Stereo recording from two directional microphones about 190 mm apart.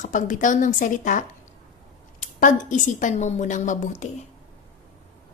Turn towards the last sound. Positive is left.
turn(degrees=40)  # may be behind; listen again after turning